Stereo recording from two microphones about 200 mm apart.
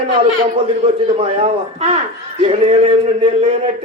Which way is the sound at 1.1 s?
30° right (ahead or behind).